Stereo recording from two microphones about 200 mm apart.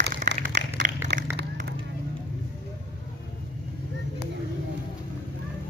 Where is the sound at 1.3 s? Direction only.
55° right (ahead or behind).